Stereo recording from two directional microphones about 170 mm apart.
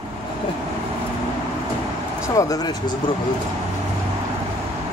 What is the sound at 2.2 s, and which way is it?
Speech, 20° left (ahead or behind).